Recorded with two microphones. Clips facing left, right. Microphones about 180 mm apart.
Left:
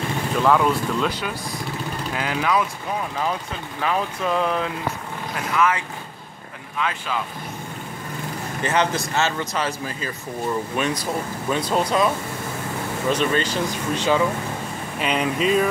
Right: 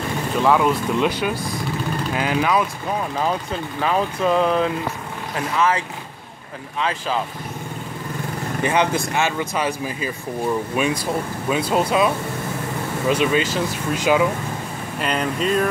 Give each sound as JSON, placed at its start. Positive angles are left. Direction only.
{"t": 0.4, "sound": "speech", "side_deg": -5}
{"t": 2.1, "sound": "speech", "side_deg": -20}
{"t": 3.8, "sound": "speech", "side_deg": -35}
{"t": 5.6, "sound": "speech", "side_deg": -35}
{"t": 8.6, "sound": "speech", "side_deg": -15}
{"t": 13.1, "sound": "speech", "side_deg": -10}
{"t": 15.0, "sound": "speech", "side_deg": 0}